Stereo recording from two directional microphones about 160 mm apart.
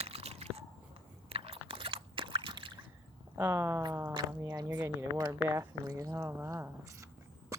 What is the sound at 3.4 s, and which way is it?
Speech, 15° right (ahead or behind).